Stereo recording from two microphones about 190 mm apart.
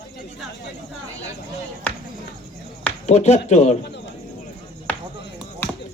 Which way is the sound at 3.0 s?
35° left (ahead or behind).